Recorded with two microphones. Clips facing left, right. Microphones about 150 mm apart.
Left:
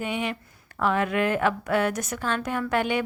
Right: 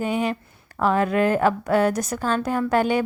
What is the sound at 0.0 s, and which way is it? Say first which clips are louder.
A woman's voice: right 5 dB; 40° right (ahead or behind).